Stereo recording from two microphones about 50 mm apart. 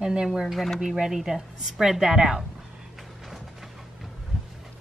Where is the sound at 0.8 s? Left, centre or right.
Centre.